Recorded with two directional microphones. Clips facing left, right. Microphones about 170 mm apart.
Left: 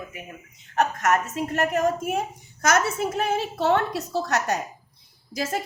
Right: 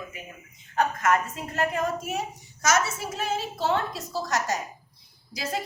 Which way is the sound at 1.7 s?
50° left (ahead or behind).